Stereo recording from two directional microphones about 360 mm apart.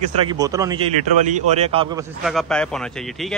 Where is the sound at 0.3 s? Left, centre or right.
Centre.